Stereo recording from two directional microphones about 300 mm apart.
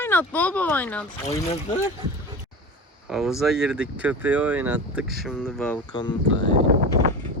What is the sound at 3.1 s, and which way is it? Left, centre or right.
Speech, centre.